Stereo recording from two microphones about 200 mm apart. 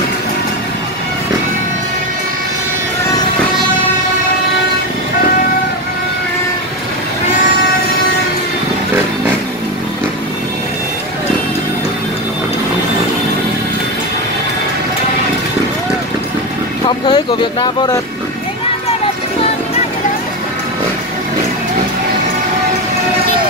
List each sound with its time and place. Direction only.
16.8 s speech: 20° left (ahead or behind)